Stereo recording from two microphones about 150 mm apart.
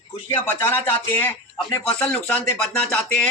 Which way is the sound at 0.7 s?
10° left (ahead or behind).